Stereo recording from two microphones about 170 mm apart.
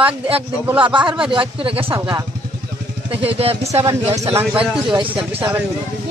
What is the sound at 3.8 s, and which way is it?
Speech, 20° right (ahead or behind).